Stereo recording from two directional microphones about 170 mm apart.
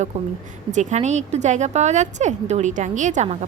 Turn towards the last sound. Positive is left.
turn(degrees=-40)  # may be behind; listen again after turning